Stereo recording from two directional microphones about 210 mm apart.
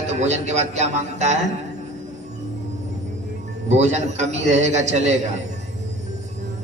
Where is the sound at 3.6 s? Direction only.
30° right (ahead or behind).